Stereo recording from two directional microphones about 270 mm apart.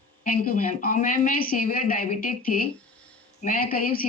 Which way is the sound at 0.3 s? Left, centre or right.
Left.